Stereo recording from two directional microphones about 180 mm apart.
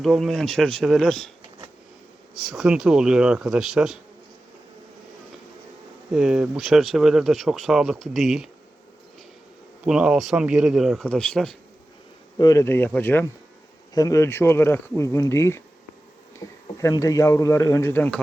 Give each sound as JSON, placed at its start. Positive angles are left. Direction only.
{"t": 0.0, "sound": "speech", "side_deg": 0}
{"t": 2.3, "sound": "speech", "side_deg": 0}
{"t": 6.1, "sound": "speech", "side_deg": -5}
{"t": 9.8, "sound": "speech", "side_deg": -5}
{"t": 12.4, "sound": "speech", "side_deg": 20}